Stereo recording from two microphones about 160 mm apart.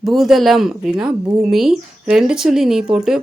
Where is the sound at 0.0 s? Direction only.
Centre (ahead or behind).